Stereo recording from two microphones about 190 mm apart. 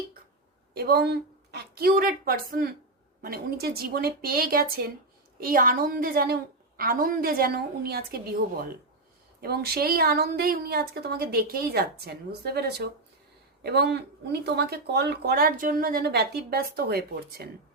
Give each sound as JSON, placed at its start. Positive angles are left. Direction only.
{"t": 0.7, "sound": "a woman's voice", "side_deg": -55}
{"t": 9.4, "sound": "a woman's voice", "side_deg": -55}